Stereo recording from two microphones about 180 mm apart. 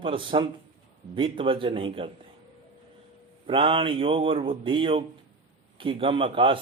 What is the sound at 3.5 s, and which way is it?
A man's voice, 30° right (ahead or behind).